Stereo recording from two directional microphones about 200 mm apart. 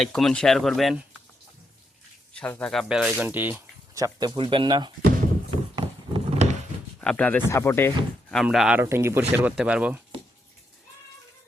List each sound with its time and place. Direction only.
0.0 s speech: centre (ahead or behind)
2.3 s speech: 5° left (ahead or behind); by 4.9 s 25° right (ahead or behind)
5.7 s a sound: 30° right (ahead or behind)
7.0 s speech: 5° left (ahead or behind)